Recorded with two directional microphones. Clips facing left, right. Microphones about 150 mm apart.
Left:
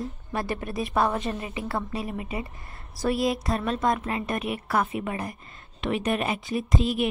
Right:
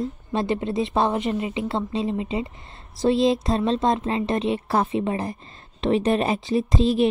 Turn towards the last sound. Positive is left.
turn(degrees=-30)  # may be behind; listen again after turning